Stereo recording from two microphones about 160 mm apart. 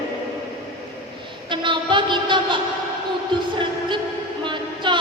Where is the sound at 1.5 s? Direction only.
30° right (ahead or behind).